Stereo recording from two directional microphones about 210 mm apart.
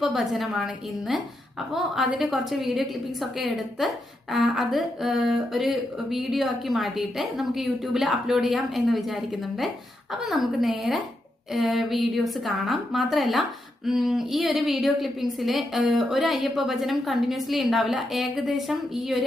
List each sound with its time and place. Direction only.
0.0 s a woman's voice: centre (ahead or behind)
10.2 s a woman's voice: centre (ahead or behind)